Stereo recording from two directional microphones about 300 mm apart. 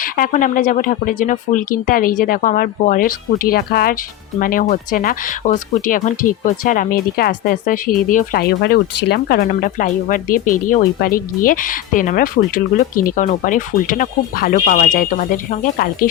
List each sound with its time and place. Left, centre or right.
0.0 s speech: left